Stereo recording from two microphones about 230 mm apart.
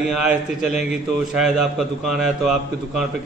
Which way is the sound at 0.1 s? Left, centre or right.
Centre.